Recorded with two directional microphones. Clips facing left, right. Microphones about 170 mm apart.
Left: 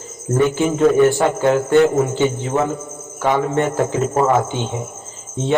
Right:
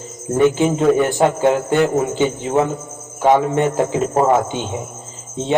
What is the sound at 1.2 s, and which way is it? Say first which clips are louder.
Speech: right 2 dB; 20° right (ahead or behind).